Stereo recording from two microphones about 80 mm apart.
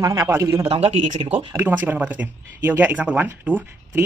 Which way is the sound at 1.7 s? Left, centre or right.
Centre.